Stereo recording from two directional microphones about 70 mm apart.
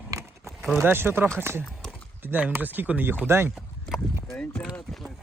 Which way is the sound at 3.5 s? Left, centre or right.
Centre.